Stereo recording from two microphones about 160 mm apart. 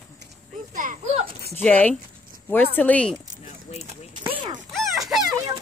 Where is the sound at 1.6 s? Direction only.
10° left (ahead or behind).